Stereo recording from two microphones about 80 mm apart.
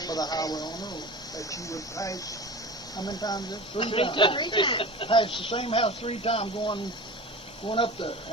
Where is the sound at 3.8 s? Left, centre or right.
Left.